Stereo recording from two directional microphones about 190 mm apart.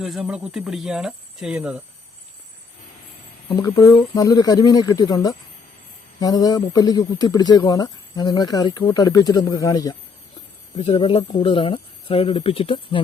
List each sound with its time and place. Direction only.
0.0 s speech: centre (ahead or behind)
3.5 s speech: 15° left (ahead or behind)